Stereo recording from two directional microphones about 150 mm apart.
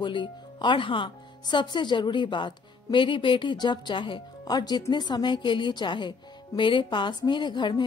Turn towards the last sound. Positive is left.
turn(degrees=30)  # may be behind; listen again after turning